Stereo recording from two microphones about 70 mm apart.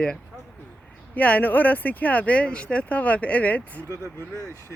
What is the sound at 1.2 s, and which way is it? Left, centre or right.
Speech, left.